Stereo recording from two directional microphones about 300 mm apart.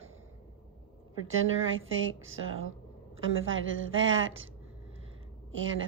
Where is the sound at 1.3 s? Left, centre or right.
Right.